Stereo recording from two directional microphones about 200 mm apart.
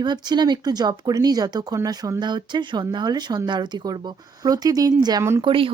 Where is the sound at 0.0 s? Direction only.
20° right (ahead or behind).